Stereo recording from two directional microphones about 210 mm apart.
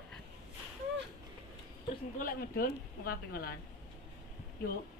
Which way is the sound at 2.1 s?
45° left (ahead or behind).